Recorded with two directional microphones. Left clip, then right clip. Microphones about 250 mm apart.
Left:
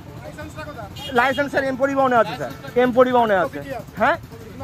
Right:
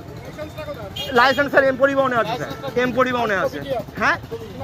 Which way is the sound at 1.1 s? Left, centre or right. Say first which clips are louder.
Right 4 dB; centre.